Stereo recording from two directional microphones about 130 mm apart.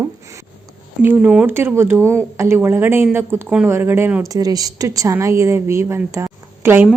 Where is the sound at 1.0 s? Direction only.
15° right (ahead or behind).